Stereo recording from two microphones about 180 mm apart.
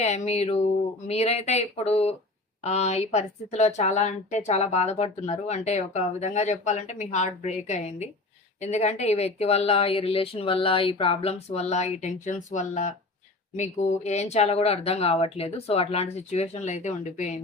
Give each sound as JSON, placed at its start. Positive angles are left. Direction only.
{"t": 0.0, "sound": "speech", "side_deg": 35}